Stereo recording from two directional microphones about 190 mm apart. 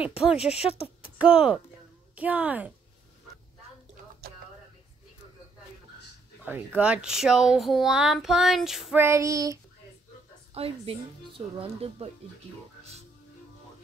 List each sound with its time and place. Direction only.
0.4 s speech: 35° left (ahead or behind)
1.2 s speech: 5° right (ahead or behind)
2.1 s child singing: 5° right (ahead or behind)
6.8 s speech: 5° right (ahead or behind)
9.0 s child singing: 15° right (ahead or behind)
10.5 s speech: 30° right (ahead or behind)